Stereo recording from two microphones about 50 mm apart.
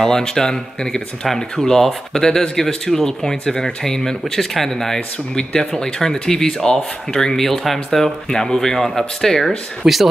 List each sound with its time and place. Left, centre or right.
0.0 s speech: centre
2.2 s speech: centre
9.8 s speech: centre